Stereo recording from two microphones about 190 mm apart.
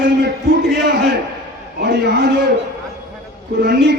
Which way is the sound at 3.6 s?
60° right (ahead or behind).